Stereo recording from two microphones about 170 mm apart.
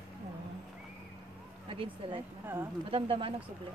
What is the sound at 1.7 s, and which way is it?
Speech, 30° right (ahead or behind).